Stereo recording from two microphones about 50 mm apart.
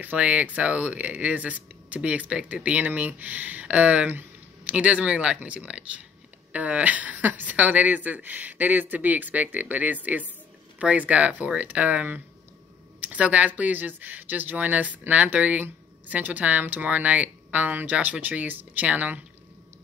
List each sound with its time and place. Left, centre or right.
0.0 s speech: right